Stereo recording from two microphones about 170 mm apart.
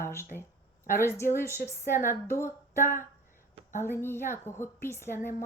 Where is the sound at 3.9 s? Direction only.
15° left (ahead or behind).